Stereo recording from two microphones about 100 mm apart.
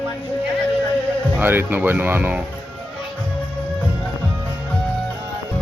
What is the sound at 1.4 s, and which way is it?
Speech, 20° right (ahead or behind).